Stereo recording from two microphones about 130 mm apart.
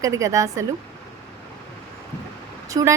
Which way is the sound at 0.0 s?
25° right (ahead or behind).